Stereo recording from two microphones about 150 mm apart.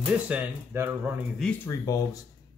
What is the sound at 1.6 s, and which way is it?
Speech, 20° left (ahead or behind).